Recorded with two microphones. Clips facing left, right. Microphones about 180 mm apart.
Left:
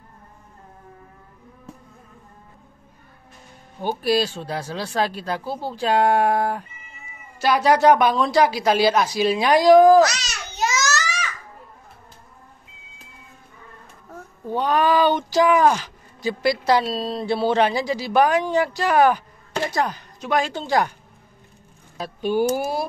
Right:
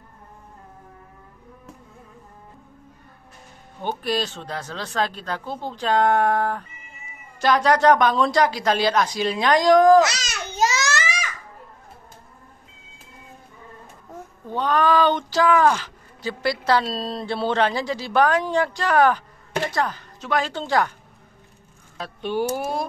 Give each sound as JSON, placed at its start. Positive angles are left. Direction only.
{"t": 3.8, "sound": "speech", "side_deg": 10}
{"t": 10.2, "sound": "babbling", "side_deg": -50}
{"t": 14.5, "sound": "speech", "side_deg": 10}
{"t": 21.9, "sound": "speech", "side_deg": 10}